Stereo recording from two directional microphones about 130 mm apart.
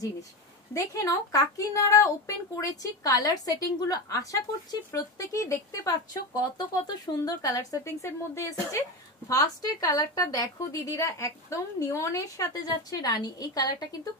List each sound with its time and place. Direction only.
0.7 s a woman's voice: 25° left (ahead or behind)